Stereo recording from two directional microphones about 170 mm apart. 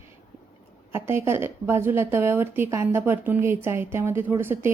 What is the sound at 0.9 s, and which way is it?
A woman's voice, 15° right (ahead or behind).